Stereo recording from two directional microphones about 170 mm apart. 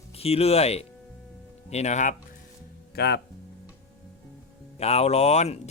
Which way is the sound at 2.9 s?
75° left (ahead or behind).